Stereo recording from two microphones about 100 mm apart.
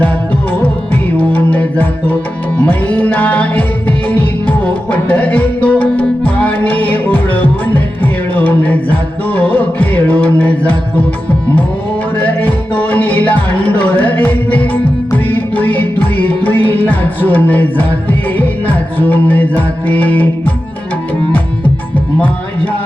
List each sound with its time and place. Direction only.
1.1 s music: 15° left (ahead or behind)
12.1 s music: 15° left (ahead or behind)